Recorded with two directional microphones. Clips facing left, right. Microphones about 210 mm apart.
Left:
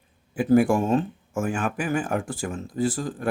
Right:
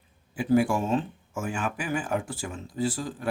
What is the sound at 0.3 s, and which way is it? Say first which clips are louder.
Speech: left 4 dB; 50° left (ahead or behind).